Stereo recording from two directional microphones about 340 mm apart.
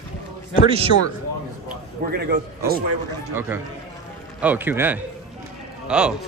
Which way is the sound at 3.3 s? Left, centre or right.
Centre.